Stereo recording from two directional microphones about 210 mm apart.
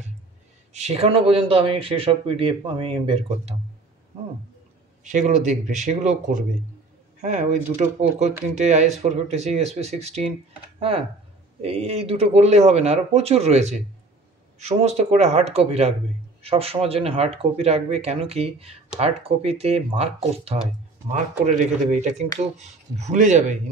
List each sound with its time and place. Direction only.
0.7 s speech: 30° right (ahead or behind)
5.0 s speech: 35° right (ahead or behind)